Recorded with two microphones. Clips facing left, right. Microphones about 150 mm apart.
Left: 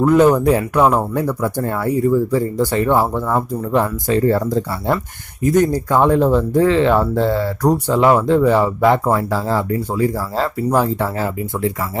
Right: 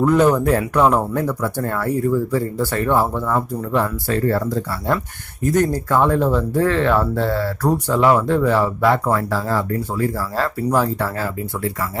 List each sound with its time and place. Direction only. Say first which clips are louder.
0.0 s speech: left 3 dB; 10° left (ahead or behind)